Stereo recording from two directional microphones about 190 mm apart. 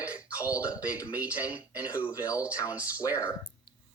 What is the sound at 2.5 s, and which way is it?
Speech, 15° left (ahead or behind).